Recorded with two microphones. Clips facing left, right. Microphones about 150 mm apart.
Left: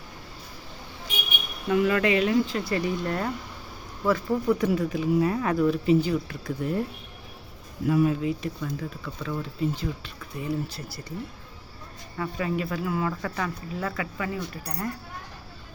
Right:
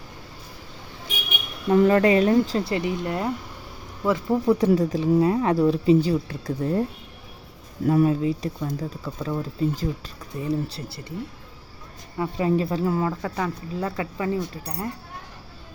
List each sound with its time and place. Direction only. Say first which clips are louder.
1.7 s speech: right 5 dB; 35° right (ahead or behind)
2.7 s speech: right 1 dB; 20° right (ahead or behind); by 6.8 s 35° right (ahead or behind)
7.9 s speech: right 3 dB; 35° right (ahead or behind)
12.1 s speech: right 6 dB; 25° right (ahead or behind)